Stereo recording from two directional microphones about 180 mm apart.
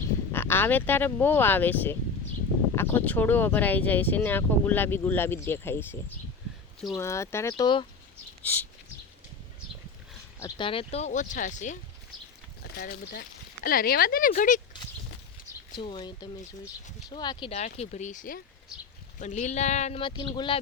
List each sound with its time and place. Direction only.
0.3 s speech: 10° left (ahead or behind)
7.5 s speech: 25° left (ahead or behind)
8.4 s a sound: 10° left (ahead or behind)
10.4 s speech: 30° left (ahead or behind)
12.8 s speech: 55° left (ahead or behind)
15.7 s speech: 25° left (ahead or behind)
17.5 s speech: 40° left (ahead or behind)